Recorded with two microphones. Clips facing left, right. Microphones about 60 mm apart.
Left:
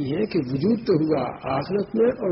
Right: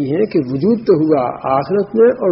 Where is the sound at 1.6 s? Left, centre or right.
Right.